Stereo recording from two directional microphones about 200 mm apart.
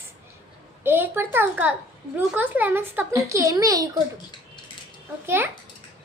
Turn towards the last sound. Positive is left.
turn(degrees=-10)  # may be behind; listen again after turning